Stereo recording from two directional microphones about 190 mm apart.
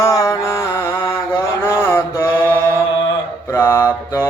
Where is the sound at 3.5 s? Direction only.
15° left (ahead or behind).